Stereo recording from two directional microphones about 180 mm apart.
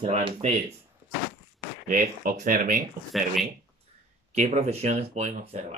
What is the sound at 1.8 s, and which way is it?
Speech, 50° right (ahead or behind).